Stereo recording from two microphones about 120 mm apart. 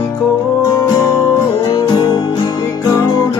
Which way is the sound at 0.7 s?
30° left (ahead or behind).